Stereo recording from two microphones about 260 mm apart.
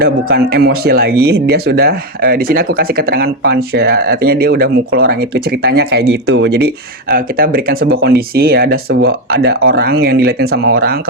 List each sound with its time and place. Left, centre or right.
0.0 s speech: right